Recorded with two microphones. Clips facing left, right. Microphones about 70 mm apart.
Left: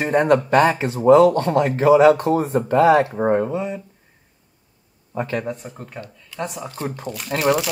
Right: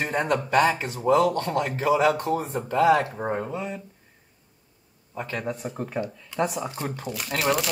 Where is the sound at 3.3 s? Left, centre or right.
Centre.